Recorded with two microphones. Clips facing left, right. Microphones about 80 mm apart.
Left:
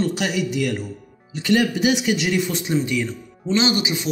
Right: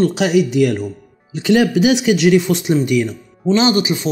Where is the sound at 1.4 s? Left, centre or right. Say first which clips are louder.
Right 5 dB; right.